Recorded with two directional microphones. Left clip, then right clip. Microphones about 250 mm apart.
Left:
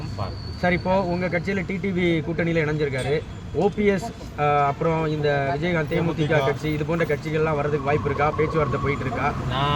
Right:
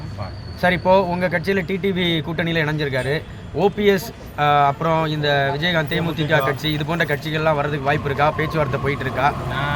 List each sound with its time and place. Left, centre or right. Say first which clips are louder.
0.6 s speech: right 6 dB; right